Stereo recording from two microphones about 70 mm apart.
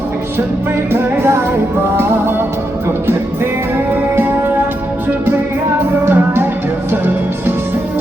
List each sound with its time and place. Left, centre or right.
0.9 s music: right
4.1 s music: right
6.1 s music: right